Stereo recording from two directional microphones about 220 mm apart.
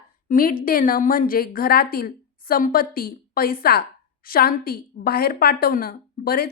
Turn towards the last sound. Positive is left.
turn(degrees=45)  # may be behind; listen again after turning